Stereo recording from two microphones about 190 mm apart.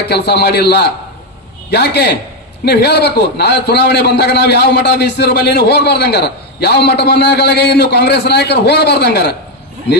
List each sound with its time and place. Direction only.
0.1 s a man's voice: 60° left (ahead or behind)